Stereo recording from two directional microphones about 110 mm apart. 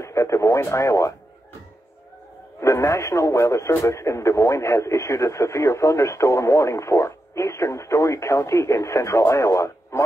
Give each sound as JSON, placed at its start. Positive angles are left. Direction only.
{"t": 0.0, "sound": "speech", "side_deg": 25}
{"t": 2.6, "sound": "speech", "side_deg": 25}